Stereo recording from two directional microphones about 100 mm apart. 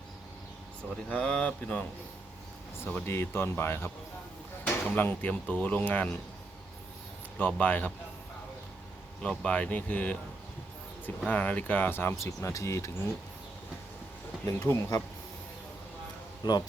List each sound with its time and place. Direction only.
1.1 s speech: 10° left (ahead or behind)
7.3 s speech: 15° left (ahead or behind)
9.2 s speech: 10° left (ahead or behind)
11.3 s speech: 15° left (ahead or behind); by 12.9 s 30° left (ahead or behind)
14.6 s speech: 25° left (ahead or behind)
16.4 s speech: 40° left (ahead or behind)